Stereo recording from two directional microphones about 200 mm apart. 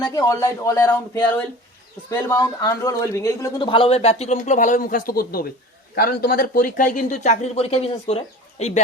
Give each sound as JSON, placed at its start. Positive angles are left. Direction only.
{"t": 0.1, "sound": "speech", "side_deg": 15}
{"t": 3.7, "sound": "speech", "side_deg": 30}